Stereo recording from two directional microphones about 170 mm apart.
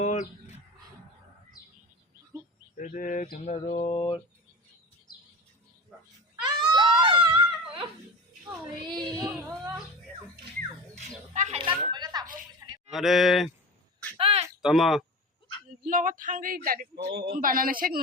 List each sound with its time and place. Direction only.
0.0 s bird: 45° left (ahead or behind)
2.7 s speech: 50° left (ahead or behind)
3.3 s mantra: 40° left (ahead or behind)
6.4 s screaming: 25° right (ahead or behind)
9.0 s child singing: 25° right (ahead or behind)
10.9 s speech: 45° right (ahead or behind)
11.5 s speech: 30° right (ahead or behind)
12.3 s a sound: 25° right (ahead or behind)
12.9 s speech: centre (ahead or behind)
14.2 s a sound: 35° right (ahead or behind)
14.6 s speech: centre (ahead or behind)
15.8 s speech: 50° right (ahead or behind)